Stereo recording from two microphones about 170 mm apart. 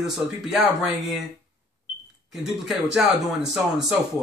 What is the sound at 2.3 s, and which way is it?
A man's voice, centre (ahead or behind).